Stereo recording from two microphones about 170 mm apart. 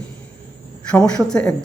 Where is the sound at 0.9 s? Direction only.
5° left (ahead or behind).